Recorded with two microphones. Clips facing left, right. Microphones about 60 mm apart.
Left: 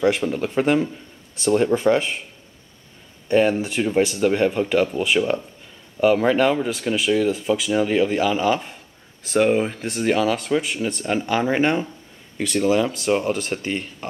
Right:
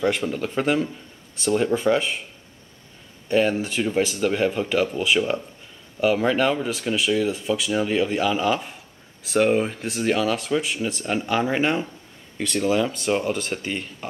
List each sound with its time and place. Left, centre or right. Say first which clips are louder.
0.0 s speech: left 3 dB; centre
3.3 s speech: left 3 dB; centre